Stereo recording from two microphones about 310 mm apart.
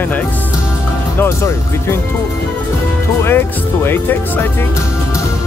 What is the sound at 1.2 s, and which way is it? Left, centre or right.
Speech, centre.